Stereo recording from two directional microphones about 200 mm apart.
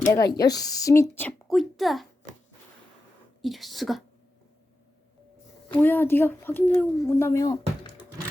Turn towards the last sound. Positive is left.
turn(degrees=20)  # may be behind; listen again after turning